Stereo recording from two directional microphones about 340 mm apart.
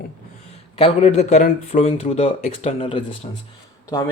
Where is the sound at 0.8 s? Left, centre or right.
Centre.